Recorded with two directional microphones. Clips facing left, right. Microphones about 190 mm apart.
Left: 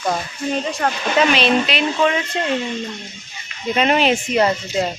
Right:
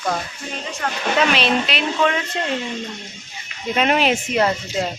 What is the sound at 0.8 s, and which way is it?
Insect, 40° left (ahead or behind).